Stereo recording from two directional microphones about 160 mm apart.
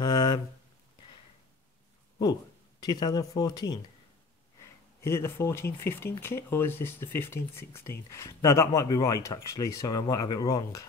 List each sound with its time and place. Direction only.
0.0 s a sound: 25° left (ahead or behind)
2.8 s speech: 25° left (ahead or behind)
5.0 s speech: 15° left (ahead or behind)